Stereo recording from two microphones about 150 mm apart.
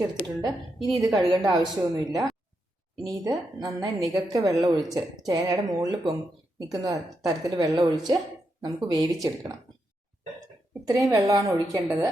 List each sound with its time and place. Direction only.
0.9 s a woman's voice: 25° right (ahead or behind)
10.8 s a woman's voice: 25° right (ahead or behind)